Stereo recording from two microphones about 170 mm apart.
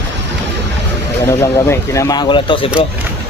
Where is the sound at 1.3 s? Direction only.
15° left (ahead or behind).